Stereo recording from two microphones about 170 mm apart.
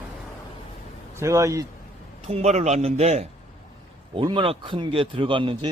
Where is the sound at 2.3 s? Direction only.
40° right (ahead or behind).